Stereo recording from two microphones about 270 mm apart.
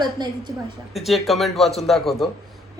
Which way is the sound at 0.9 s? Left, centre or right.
Centre.